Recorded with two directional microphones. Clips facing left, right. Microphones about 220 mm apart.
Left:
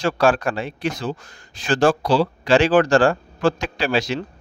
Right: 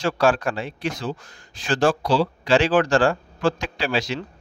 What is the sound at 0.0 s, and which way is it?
Speech, 50° left (ahead or behind).